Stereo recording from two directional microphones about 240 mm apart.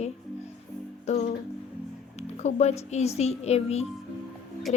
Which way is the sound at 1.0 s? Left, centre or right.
Left.